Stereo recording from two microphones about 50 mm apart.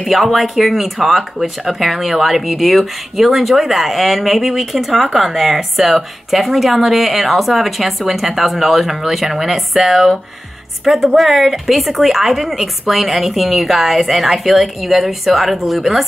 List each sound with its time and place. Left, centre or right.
0.0 s speech: centre